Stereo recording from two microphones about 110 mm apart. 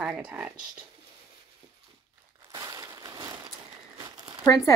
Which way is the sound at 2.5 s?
30° right (ahead or behind).